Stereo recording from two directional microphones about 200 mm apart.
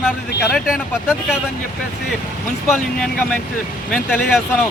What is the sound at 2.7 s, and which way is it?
Speech, 5° left (ahead or behind).